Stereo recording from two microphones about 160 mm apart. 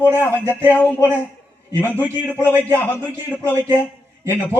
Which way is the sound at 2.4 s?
15° right (ahead or behind).